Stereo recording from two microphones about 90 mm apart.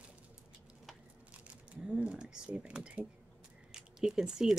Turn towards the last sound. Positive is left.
turn(degrees=-5)  # may be behind; listen again after turning